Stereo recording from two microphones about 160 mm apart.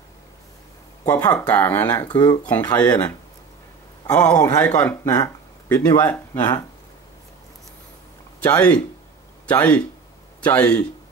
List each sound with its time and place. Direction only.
1.0 s speech: 10° left (ahead or behind)
1.9 s speech: 25° left (ahead or behind)
2.4 s speech: 10° left (ahead or behind)
4.1 s speech: 5° left (ahead or behind)
4.4 s speech: 20° left (ahead or behind)
8.4 s speech: 10° left (ahead or behind)